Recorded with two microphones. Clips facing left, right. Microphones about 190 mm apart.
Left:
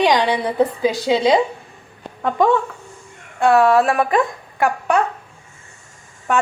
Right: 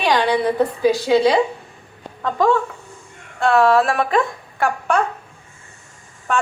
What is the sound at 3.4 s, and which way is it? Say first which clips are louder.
Speech: left 1 dB; 15° left (ahead or behind).